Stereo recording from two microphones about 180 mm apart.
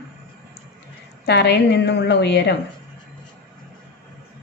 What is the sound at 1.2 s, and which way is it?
A woman's voice, 65° left (ahead or behind).